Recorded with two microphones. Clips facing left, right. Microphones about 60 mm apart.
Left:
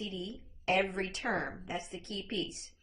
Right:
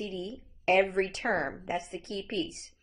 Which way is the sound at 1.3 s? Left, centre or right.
Right.